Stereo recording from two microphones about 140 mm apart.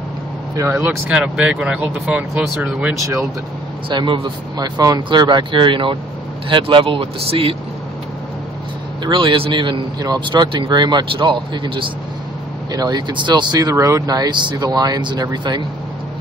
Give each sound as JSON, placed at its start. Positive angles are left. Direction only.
{"t": 0.7, "sound": "speech", "side_deg": -5}
{"t": 3.0, "sound": "speech", "side_deg": -25}
{"t": 3.9, "sound": "speech", "side_deg": -35}
{"t": 9.0, "sound": "speech", "side_deg": -35}